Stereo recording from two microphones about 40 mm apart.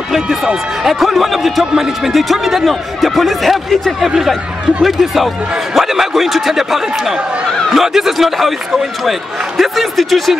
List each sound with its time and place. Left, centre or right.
0.1 s a man's voice: centre
9.6 s speech: centre